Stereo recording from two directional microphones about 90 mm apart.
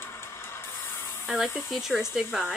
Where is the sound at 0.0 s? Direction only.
25° left (ahead or behind).